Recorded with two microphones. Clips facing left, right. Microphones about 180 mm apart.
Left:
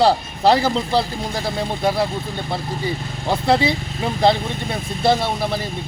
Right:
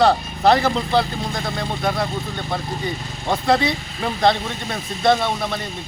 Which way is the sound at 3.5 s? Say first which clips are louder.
Left 1 dB; 30° left (ahead or behind).